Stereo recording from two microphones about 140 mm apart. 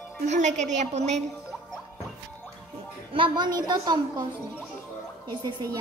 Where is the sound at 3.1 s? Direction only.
35° right (ahead or behind).